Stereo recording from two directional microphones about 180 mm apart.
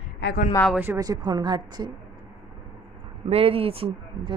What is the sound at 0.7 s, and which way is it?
A woman's voice, 15° right (ahead or behind).